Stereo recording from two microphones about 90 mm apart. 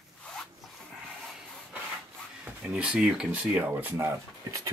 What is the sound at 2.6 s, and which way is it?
Speech, 10° right (ahead or behind).